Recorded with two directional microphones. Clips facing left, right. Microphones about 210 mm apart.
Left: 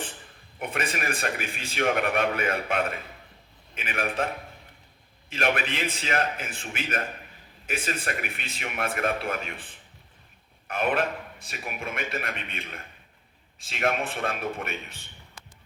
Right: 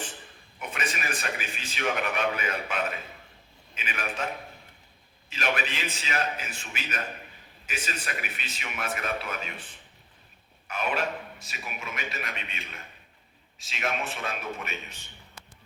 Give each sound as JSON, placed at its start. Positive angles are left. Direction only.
{"t": 0.6, "sound": "a man's voice", "side_deg": 55}
{"t": 5.3, "sound": "a man's voice", "side_deg": 55}
{"t": 10.7, "sound": "a man's voice", "side_deg": 55}